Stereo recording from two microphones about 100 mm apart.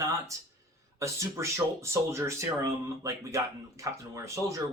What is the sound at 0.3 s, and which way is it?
Speech, 30° right (ahead or behind).